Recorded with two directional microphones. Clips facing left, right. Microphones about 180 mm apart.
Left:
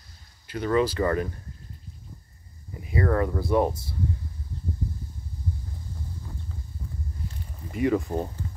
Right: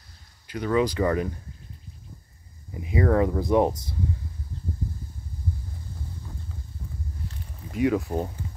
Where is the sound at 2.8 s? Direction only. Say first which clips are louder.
Right 3 dB; 15° right (ahead or behind).